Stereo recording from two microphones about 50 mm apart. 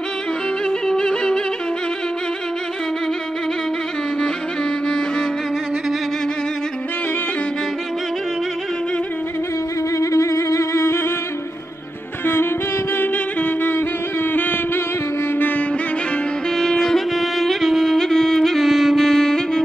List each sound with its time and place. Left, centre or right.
0.7 s yodeling: centre
9.9 s music: left
12.9 s music: left
15.3 s music: left
16.5 s music: centre